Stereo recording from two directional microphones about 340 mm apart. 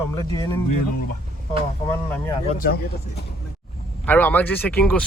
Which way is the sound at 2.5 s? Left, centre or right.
Left.